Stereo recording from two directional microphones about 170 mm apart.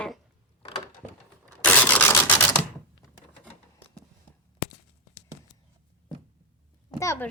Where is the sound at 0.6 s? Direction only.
30° left (ahead or behind).